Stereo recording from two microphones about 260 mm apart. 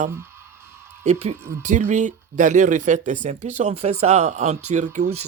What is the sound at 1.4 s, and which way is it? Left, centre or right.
Speech, centre.